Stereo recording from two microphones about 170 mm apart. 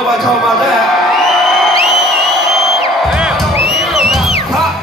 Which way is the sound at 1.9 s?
Centre (ahead or behind).